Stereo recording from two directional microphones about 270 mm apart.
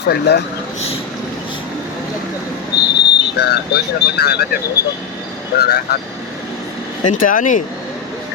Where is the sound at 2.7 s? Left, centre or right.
Left.